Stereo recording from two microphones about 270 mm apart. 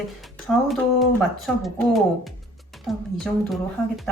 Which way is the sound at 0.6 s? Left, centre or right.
Centre.